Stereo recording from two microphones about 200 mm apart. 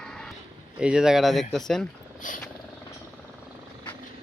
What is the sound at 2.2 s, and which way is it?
Vehicle, 40° left (ahead or behind).